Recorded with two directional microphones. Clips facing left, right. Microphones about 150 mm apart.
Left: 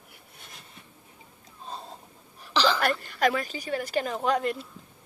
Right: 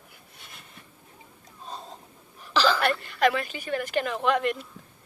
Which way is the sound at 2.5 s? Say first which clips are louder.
Right 1 dB; 15° left (ahead or behind).